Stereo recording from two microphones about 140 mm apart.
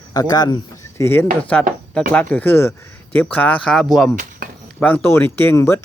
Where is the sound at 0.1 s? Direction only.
30° left (ahead or behind).